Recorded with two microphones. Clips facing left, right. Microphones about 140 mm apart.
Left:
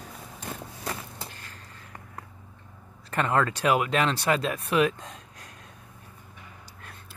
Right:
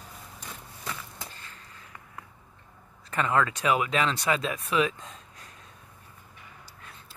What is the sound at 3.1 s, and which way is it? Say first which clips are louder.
Speech: left 1 dB; 40° left (ahead or behind).